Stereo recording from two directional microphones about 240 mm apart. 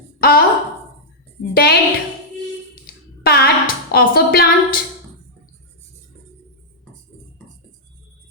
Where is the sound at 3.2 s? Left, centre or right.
Left.